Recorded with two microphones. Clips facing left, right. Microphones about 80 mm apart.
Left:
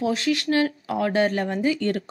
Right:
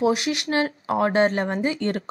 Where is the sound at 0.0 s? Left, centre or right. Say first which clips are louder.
Right 1 dB; centre.